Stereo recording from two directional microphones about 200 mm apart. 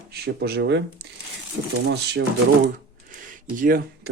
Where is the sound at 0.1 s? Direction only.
50° right (ahead or behind).